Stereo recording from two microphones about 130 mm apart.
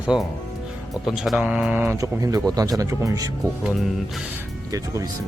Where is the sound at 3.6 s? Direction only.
Centre (ahead or behind).